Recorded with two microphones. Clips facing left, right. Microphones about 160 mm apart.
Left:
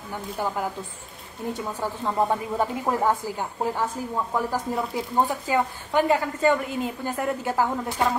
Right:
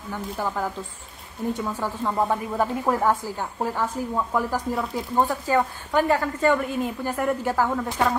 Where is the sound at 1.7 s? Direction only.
15° left (ahead or behind).